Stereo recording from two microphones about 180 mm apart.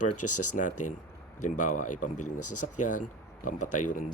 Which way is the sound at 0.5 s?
45° left (ahead or behind).